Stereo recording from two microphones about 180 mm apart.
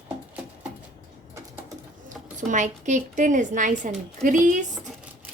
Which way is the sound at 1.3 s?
15° right (ahead or behind).